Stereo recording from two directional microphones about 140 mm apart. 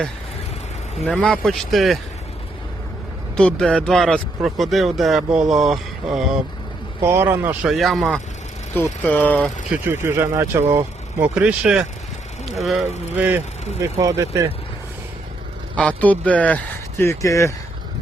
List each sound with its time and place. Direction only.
1.0 s speech: 5° left (ahead or behind)
3.3 s speech: 5° left (ahead or behind)
7.0 s speech: 15° right (ahead or behind)
7.7 s speech: centre (ahead or behind)
8.7 s speech: 15° left (ahead or behind)
9.7 s speech: 15° right (ahead or behind)
11.3 s speech: 5° right (ahead or behind)
13.1 s speech: 10° right (ahead or behind)
13.8 s speech: 25° right (ahead or behind)
15.7 s speech: 10° left (ahead or behind)
17.0 s speech: 20° left (ahead or behind)